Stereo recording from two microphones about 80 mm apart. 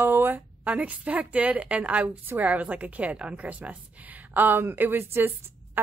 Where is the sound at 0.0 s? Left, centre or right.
Right.